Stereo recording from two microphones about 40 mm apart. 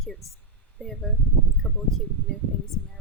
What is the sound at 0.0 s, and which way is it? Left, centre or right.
Speech, centre.